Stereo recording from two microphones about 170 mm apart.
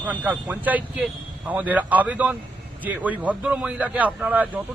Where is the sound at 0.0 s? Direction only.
10° right (ahead or behind).